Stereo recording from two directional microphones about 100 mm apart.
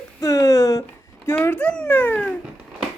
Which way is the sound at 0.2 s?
35° left (ahead or behind).